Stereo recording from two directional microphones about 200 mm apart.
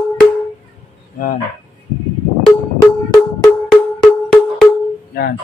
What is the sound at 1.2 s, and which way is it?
Speech, 40° left (ahead or behind).